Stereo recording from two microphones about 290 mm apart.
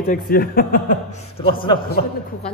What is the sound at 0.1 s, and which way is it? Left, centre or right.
Speech, left.